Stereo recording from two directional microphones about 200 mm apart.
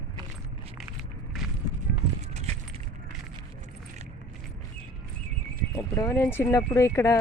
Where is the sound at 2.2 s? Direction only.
35° right (ahead or behind).